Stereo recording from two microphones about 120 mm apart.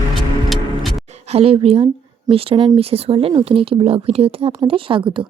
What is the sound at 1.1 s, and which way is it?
A woman's voice, 60° right (ahead or behind).